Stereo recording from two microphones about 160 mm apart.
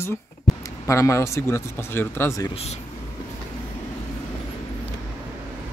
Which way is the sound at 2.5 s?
40° left (ahead or behind).